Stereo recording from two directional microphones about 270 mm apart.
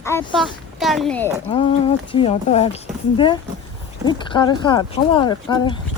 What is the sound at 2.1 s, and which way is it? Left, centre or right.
Speech, left.